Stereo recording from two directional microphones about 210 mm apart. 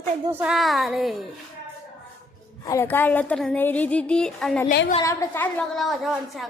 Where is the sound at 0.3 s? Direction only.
5° right (ahead or behind).